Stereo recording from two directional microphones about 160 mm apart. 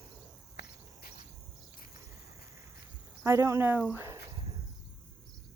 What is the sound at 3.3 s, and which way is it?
Speech, 20° right (ahead or behind).